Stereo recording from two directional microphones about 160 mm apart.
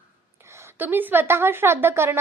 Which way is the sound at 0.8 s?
10° right (ahead or behind).